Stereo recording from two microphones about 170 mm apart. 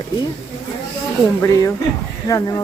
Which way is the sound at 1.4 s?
15° left (ahead or behind).